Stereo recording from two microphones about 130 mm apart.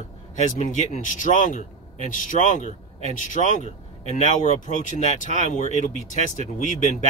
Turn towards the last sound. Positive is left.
turn(degrees=75)  # may be behind; listen again after turning